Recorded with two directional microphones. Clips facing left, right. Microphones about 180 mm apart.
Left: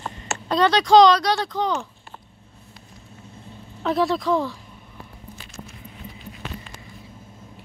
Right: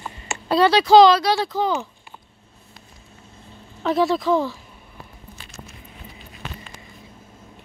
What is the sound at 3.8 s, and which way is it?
Speech, centre (ahead or behind).